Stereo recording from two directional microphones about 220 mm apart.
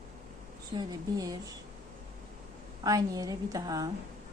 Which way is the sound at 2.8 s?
15° right (ahead or behind).